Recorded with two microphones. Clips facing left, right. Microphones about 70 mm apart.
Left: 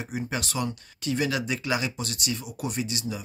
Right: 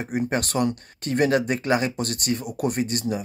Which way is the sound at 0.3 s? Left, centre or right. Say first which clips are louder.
Right 6 dB; right.